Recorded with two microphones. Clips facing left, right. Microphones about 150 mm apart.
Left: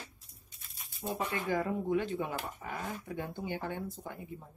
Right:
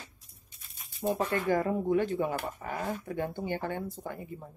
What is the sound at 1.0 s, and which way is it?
Speech, 60° right (ahead or behind).